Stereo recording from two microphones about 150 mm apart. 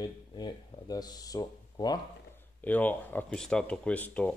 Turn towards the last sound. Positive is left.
turn(degrees=10)  # may be behind; listen again after turning